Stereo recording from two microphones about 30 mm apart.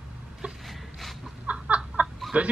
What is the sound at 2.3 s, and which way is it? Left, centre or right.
Speech, right.